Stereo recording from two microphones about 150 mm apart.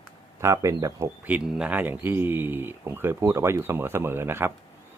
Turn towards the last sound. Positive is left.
turn(degrees=-15)  # may be behind; listen again after turning